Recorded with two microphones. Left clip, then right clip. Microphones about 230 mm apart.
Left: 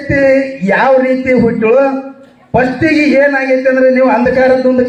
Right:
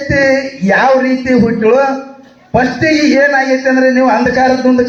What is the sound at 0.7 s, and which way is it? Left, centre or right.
A man's voice, left.